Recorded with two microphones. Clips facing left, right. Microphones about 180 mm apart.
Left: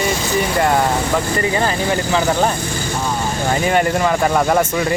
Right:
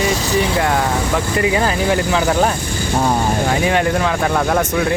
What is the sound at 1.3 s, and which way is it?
Speech, 5° right (ahead or behind).